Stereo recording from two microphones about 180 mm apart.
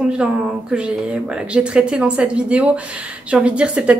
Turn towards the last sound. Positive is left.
turn(degrees=-5)  # may be behind; listen again after turning